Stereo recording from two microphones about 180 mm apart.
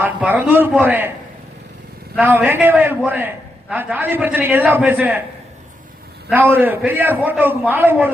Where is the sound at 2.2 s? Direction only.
10° right (ahead or behind).